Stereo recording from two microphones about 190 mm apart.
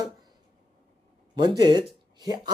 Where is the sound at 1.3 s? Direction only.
25° right (ahead or behind).